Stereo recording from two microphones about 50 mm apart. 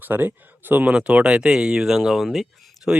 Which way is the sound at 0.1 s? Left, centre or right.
Right.